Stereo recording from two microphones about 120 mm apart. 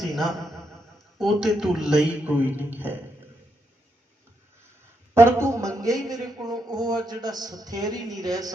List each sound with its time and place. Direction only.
0.0 s a sound: centre (ahead or behind)
1.2 s a man's voice: centre (ahead or behind)
5.1 s speech: 20° right (ahead or behind)